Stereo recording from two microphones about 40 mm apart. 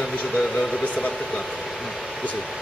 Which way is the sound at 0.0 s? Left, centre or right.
Centre.